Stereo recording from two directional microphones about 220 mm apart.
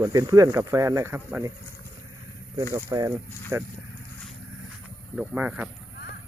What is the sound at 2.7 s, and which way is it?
Speech, 20° right (ahead or behind).